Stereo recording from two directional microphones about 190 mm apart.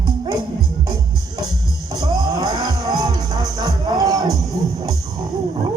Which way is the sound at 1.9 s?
20° right (ahead or behind).